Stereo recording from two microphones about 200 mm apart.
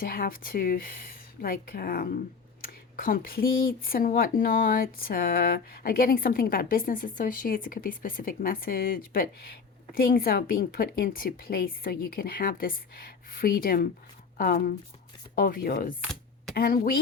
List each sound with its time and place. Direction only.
0.0 s speech: 45° left (ahead or behind)